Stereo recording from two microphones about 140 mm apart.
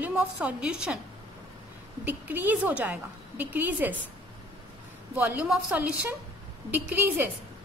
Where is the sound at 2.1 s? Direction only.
10° right (ahead or behind).